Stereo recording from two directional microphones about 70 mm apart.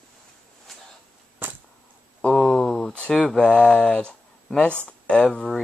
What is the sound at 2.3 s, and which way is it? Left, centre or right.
Speech, centre.